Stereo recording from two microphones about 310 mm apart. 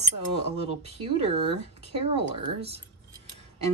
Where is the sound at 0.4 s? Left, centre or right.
Centre.